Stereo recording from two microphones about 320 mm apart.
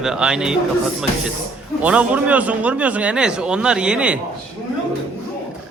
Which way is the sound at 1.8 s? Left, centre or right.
Centre.